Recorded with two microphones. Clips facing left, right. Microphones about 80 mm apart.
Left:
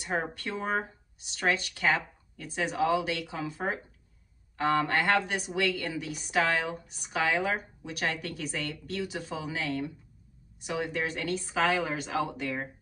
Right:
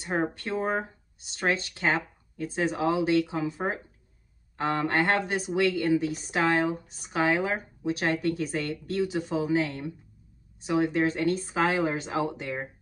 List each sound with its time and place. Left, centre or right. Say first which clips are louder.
0.0 s a woman's voice: right 3 dB; right